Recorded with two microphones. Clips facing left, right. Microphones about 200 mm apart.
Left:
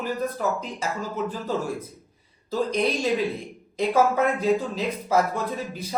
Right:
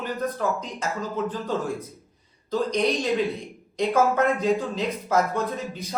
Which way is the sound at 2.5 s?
5° left (ahead or behind).